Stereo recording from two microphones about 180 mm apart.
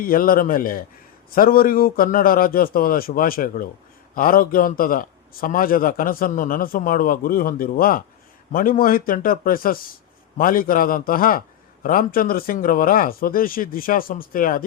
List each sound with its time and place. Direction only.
0.0 s a man's voice: 55° left (ahead or behind)